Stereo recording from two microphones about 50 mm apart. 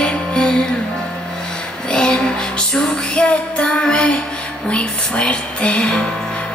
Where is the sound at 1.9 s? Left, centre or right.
Centre.